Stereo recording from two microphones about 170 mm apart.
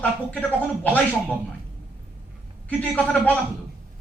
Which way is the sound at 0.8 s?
10° left (ahead or behind).